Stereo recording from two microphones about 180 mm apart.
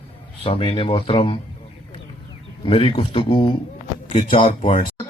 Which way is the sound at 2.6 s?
30° left (ahead or behind).